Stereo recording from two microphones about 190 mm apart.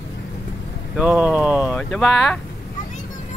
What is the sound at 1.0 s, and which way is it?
Speech, 5° right (ahead or behind).